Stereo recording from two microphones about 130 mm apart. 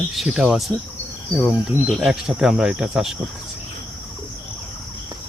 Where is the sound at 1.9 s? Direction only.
Centre (ahead or behind).